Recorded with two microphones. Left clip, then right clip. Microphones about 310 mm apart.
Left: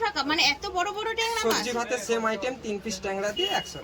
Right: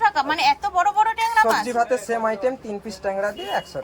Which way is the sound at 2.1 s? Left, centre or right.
Right.